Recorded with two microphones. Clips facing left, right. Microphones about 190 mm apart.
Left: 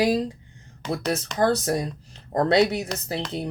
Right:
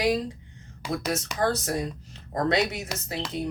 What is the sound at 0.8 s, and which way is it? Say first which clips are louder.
Speech: left 3 dB; 10° right (ahead or behind).